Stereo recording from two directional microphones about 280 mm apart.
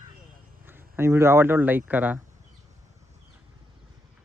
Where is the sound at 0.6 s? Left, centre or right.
Centre.